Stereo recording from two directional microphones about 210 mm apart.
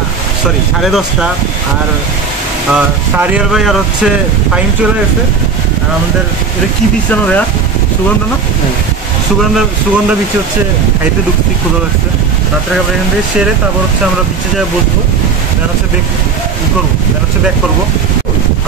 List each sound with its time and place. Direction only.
2.7 s speech: 5° right (ahead or behind)